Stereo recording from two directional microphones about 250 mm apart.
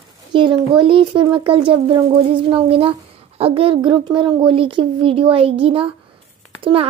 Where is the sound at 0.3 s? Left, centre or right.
Centre.